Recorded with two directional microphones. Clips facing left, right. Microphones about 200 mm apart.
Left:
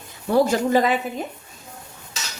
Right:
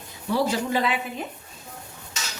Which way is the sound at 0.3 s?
50° left (ahead or behind).